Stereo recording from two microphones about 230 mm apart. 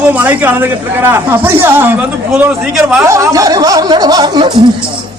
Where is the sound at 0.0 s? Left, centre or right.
Centre.